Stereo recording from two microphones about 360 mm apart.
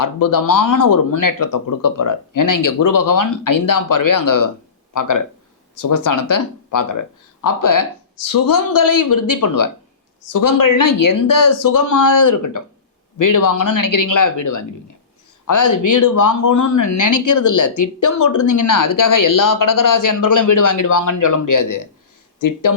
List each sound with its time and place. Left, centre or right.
0.0 s speech: left